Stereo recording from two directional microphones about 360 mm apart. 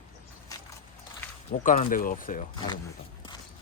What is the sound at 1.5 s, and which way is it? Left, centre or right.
Speech, left.